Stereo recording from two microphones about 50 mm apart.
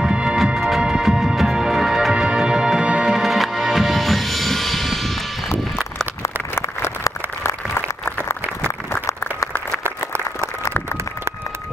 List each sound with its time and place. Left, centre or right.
0.0 s music: centre
0.6 s music: centre
3.1 s music: centre
7.4 s applause: left